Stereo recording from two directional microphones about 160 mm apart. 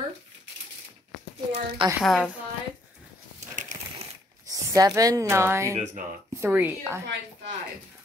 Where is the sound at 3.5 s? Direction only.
50° right (ahead or behind).